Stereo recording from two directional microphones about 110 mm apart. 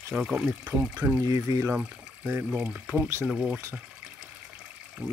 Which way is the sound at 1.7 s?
15° right (ahead or behind).